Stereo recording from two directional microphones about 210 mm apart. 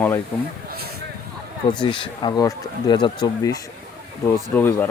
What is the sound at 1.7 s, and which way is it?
Speech, 20° left (ahead or behind).